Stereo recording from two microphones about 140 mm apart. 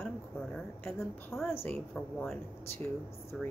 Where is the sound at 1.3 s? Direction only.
20° left (ahead or behind).